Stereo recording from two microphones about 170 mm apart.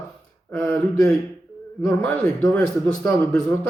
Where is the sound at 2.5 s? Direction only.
10° left (ahead or behind).